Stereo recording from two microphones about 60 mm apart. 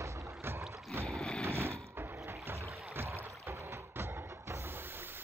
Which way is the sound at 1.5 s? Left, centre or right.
Right.